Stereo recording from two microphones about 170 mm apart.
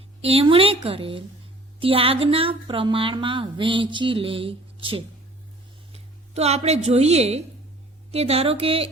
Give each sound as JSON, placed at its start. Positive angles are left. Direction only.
{"t": 0.2, "sound": "a woman's voice", "side_deg": -35}